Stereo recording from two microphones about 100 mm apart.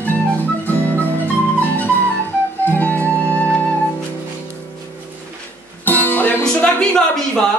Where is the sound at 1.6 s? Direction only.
15° left (ahead or behind).